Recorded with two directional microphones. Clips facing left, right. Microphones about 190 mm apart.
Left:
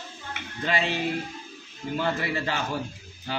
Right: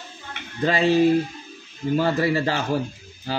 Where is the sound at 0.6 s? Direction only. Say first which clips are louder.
Right 8 dB; 40° right (ahead or behind).